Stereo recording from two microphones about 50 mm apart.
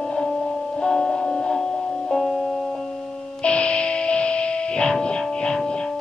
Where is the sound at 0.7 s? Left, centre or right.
Centre.